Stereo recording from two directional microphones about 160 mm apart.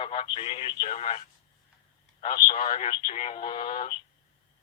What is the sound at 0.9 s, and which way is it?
Speech, 40° left (ahead or behind).